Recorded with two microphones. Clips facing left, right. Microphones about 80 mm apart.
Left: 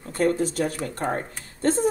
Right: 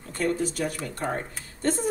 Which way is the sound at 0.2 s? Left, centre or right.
Left.